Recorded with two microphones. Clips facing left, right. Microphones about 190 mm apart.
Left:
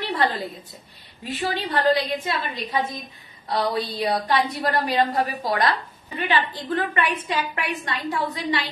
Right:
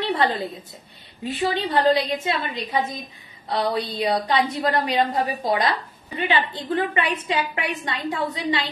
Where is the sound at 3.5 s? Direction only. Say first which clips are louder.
Even; 20° right (ahead or behind).